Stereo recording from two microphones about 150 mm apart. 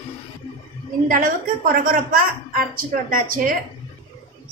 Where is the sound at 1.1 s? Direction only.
65° right (ahead or behind).